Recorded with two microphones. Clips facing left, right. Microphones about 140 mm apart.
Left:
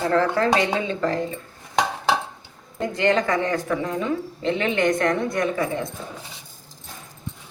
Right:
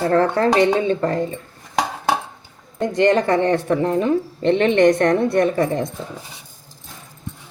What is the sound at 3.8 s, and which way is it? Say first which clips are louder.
Speech: right 7 dB; 55° right (ahead or behind).